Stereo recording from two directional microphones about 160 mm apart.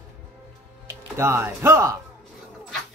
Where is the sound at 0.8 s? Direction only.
15° right (ahead or behind).